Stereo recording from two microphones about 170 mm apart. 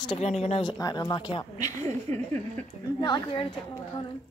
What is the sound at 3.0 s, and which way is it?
Speech, 25° left (ahead or behind).